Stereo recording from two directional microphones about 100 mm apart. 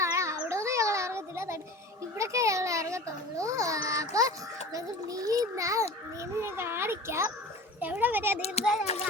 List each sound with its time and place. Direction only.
0.0 s cat: 30° right (ahead or behind)
2.1 s a sound: 30° right (ahead or behind)
4.7 s a child's voice: 35° right (ahead or behind)
8.8 s a child's voice: 90° left